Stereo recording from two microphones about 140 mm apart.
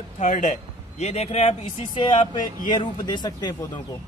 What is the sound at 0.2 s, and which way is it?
A man's voice, 60° left (ahead or behind).